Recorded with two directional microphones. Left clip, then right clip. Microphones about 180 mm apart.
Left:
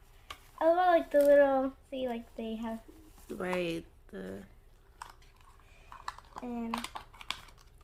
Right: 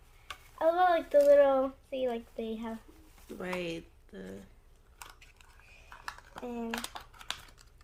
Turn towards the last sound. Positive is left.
turn(degrees=-35)  # may be behind; listen again after turning